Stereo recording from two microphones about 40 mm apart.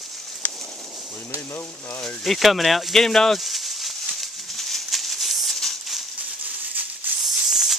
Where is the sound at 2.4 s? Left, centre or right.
Centre.